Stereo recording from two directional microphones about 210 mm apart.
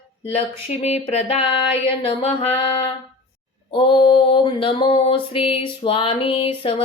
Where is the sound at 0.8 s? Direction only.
30° left (ahead or behind).